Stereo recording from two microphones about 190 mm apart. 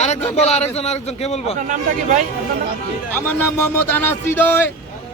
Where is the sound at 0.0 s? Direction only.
35° left (ahead or behind).